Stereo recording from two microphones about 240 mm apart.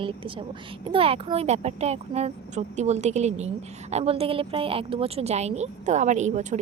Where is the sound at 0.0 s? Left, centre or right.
Right.